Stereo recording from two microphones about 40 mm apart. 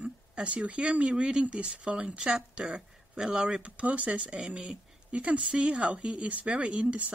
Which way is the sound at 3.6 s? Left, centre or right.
Right.